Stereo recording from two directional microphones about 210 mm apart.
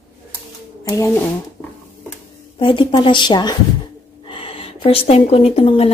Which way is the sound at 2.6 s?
25° left (ahead or behind).